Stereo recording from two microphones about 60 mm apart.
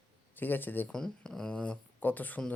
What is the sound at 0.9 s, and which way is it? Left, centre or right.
Speech, centre.